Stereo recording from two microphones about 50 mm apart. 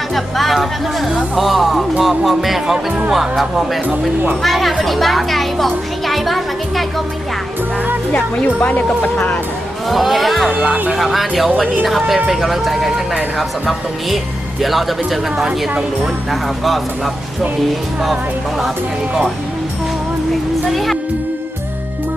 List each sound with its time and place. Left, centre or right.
0.1 s a child's voice: centre
4.4 s a child's voice: centre
8.1 s speech: left
9.9 s a child's voice: centre
20.7 s speech: centre